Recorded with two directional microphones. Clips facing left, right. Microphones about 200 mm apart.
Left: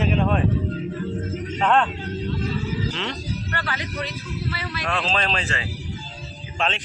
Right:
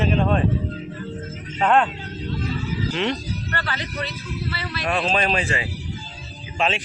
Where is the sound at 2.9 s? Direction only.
15° right (ahead or behind).